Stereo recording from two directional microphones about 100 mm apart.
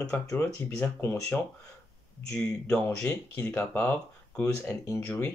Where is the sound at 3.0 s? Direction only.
30° left (ahead or behind).